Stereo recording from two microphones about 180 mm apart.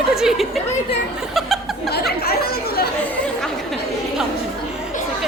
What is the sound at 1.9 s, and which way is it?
Chatter, 60° left (ahead or behind).